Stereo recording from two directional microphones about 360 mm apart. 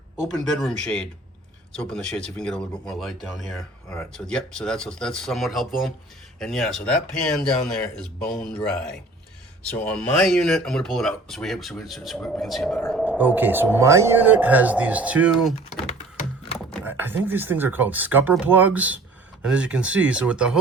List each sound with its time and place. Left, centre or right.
0.2 s speech: centre